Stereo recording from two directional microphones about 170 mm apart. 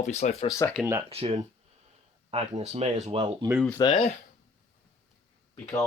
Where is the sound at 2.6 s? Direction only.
40° right (ahead or behind).